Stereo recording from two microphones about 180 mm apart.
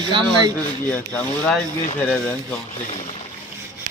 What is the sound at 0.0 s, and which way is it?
Speech, 25° right (ahead or behind).